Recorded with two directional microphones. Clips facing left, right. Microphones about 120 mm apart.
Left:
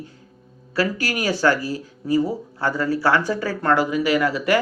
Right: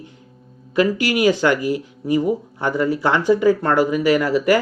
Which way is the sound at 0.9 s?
40° left (ahead or behind).